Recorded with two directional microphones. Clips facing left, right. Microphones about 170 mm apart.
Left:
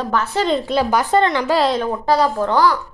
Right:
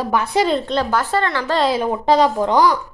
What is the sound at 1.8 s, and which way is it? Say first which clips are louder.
Speech: right 2 dB; 15° right (ahead or behind).